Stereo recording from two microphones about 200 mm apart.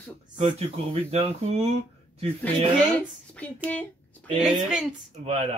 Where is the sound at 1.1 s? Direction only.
30° right (ahead or behind).